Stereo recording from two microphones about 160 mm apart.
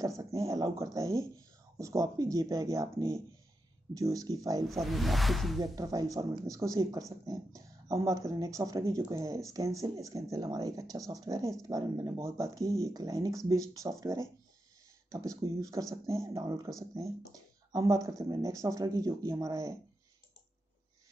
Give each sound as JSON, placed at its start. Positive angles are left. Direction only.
{"t": 0.2, "sound": "speech", "side_deg": -20}
{"t": 4.6, "sound": "speech", "side_deg": 0}
{"t": 5.6, "sound": "speech", "side_deg": -25}